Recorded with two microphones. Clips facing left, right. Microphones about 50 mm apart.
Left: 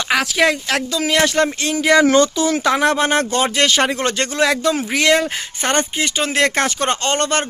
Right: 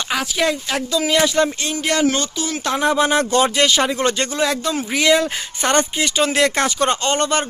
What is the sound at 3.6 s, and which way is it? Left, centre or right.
Speech, left.